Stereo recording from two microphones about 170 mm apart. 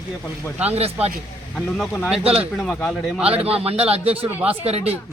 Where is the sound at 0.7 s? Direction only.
35° right (ahead or behind).